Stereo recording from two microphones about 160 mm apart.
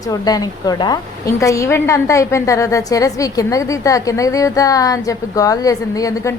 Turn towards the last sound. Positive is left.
turn(degrees=20)  # may be behind; listen again after turning